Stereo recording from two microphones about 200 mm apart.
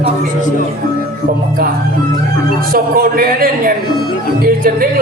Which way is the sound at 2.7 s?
45° right (ahead or behind).